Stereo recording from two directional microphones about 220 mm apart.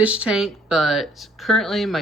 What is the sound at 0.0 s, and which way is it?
Speech, 5° right (ahead or behind).